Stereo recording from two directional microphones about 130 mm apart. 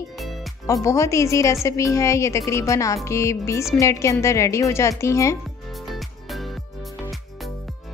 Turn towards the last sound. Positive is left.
turn(degrees=0)  # may be behind; listen again after turning